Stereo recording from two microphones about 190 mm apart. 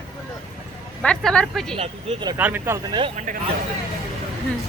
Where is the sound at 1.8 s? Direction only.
30° right (ahead or behind).